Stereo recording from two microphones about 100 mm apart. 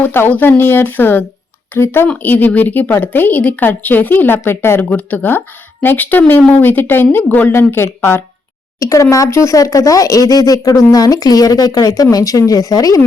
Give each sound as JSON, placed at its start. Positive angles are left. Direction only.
{"t": 0.0, "sound": "a woman's voice", "side_deg": 20}
{"t": 8.8, "sound": "speech", "side_deg": 35}